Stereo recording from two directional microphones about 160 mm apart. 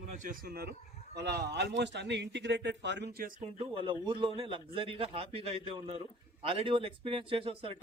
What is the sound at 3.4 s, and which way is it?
Speech, 35° right (ahead or behind).